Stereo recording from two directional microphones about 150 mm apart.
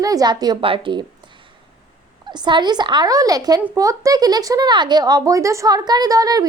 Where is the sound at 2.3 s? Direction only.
30° right (ahead or behind).